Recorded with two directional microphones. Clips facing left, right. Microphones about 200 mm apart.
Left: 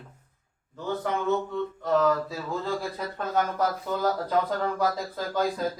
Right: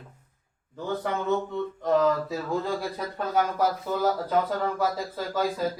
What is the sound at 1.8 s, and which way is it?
Speech, 15° right (ahead or behind).